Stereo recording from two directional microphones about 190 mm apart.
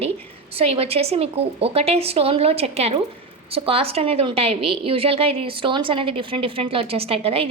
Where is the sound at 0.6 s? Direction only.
30° right (ahead or behind).